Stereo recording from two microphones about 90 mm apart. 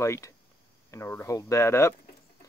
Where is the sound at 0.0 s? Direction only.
30° left (ahead or behind).